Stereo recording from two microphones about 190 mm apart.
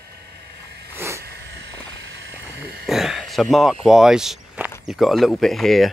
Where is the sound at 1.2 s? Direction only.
60° right (ahead or behind).